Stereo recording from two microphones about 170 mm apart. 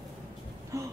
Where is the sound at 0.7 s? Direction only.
20° right (ahead or behind).